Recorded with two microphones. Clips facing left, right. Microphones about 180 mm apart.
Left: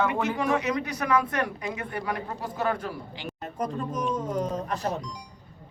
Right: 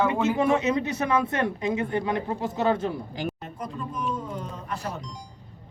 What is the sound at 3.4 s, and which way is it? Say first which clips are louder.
Speech: left 4 dB; 40° left (ahead or behind).